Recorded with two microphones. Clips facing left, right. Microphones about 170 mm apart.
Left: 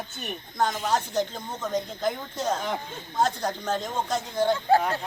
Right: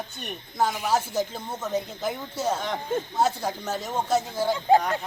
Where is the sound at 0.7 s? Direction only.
10° right (ahead or behind).